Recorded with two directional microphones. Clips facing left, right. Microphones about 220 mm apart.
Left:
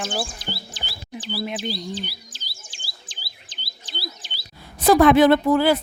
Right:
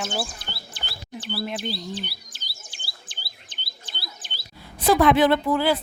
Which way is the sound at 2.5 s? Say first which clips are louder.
Even; 60° right (ahead or behind).